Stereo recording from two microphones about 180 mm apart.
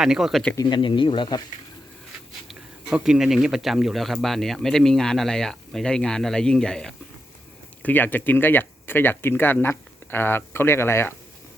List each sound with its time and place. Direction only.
0.0 s speech: centre (ahead or behind)
0.5 s speech: 25° left (ahead or behind)
2.5 s speech: 5° right (ahead or behind); by 11.1 s 15° left (ahead or behind)